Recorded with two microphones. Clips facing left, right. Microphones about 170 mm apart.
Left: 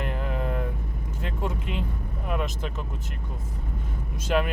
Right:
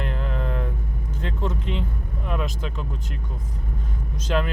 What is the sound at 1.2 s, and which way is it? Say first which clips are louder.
Speech: right 2 dB; 10° left (ahead or behind).